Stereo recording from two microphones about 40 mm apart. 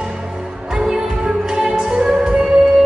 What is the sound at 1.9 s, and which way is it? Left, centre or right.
Music, right.